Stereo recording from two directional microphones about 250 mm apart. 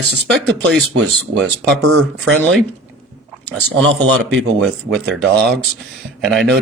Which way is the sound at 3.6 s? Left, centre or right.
Right.